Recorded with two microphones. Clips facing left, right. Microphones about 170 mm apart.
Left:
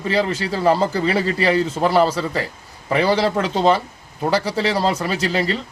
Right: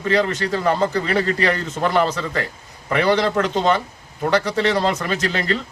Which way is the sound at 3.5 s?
35° left (ahead or behind).